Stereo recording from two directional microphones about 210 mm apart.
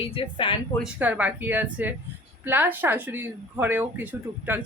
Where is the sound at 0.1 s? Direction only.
25° left (ahead or behind).